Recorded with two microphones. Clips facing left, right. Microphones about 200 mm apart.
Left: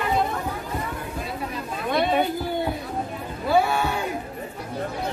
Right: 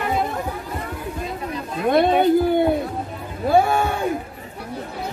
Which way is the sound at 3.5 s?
50° right (ahead or behind).